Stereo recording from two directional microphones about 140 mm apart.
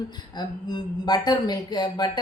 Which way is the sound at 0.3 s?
30° left (ahead or behind).